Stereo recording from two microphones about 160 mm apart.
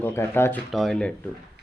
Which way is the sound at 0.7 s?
Centre (ahead or behind).